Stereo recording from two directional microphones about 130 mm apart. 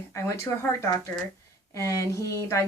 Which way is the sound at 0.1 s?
20° left (ahead or behind).